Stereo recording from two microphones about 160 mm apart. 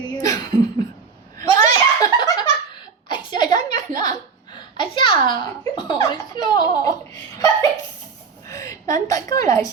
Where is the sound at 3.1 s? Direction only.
30° left (ahead or behind).